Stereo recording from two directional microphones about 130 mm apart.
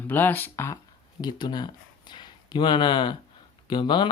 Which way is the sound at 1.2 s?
35° left (ahead or behind).